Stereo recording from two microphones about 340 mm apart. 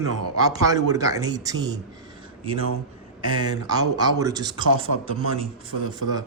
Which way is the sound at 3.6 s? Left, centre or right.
Centre.